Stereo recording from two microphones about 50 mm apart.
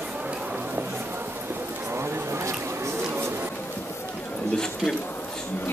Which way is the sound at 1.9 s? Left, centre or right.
Right.